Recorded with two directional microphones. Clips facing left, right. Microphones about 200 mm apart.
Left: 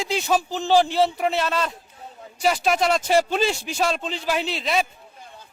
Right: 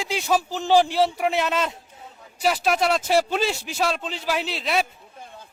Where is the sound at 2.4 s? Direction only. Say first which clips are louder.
Left 1 dB; 5° right (ahead or behind).